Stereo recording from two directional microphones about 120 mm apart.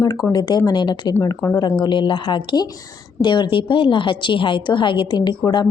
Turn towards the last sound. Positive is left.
turn(degrees=35)  # may be behind; listen again after turning